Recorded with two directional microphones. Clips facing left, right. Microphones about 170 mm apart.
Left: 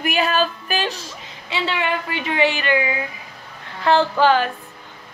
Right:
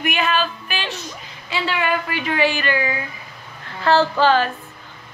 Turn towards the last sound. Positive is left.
turn(degrees=15)  # may be behind; listen again after turning